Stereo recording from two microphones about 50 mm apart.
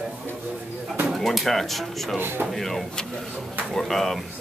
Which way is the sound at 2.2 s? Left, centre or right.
Right.